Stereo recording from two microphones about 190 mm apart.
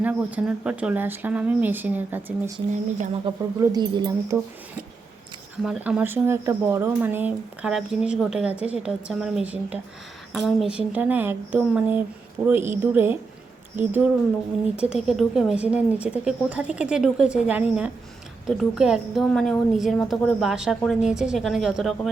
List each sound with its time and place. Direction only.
0.0 s speech: 10° right (ahead or behind)
3.3 s speech: 25° right (ahead or behind)
5.6 s a woman's voice: 5° right (ahead or behind)